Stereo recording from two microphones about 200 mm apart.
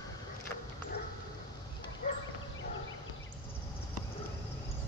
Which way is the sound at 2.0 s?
45° left (ahead or behind).